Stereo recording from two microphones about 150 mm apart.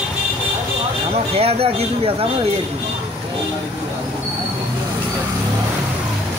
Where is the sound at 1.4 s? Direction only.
40° right (ahead or behind).